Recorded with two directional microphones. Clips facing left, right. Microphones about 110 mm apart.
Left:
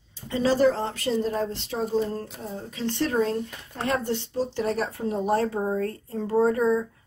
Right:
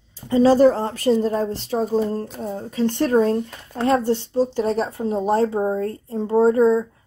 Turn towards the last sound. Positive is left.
turn(degrees=-30)  # may be behind; listen again after turning